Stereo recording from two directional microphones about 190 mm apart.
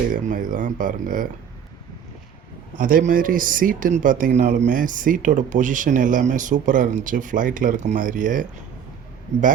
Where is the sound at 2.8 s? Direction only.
45° right (ahead or behind).